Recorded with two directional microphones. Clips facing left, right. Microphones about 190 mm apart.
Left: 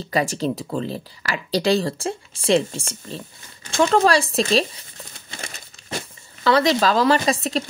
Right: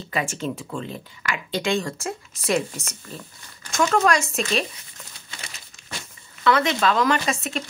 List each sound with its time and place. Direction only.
0.1 s speech: 40° left (ahead or behind)
5.4 s crumpling: 50° left (ahead or behind)
6.4 s speech: 35° left (ahead or behind)